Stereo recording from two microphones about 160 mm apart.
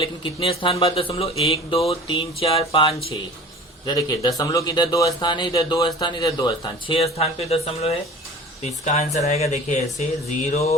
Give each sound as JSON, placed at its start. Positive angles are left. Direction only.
{"t": 0.0, "sound": "speech", "side_deg": 30}
{"t": 3.8, "sound": "speech", "side_deg": 20}